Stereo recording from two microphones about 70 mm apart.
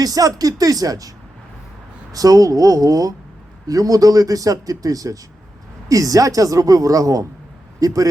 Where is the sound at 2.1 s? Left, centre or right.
Right.